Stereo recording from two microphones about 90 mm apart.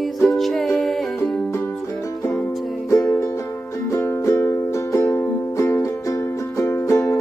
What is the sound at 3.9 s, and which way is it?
Music, 30° left (ahead or behind).